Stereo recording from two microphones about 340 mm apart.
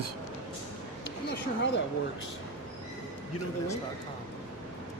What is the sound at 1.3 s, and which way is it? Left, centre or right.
Speech, left.